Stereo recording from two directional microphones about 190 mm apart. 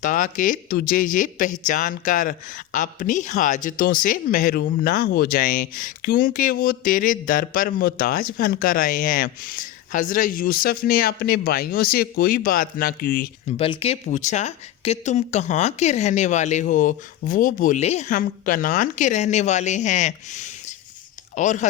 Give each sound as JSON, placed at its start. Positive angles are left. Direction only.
{"t": 0.0, "sound": "speech", "side_deg": 45}
{"t": 13.6, "sound": "speech", "side_deg": 30}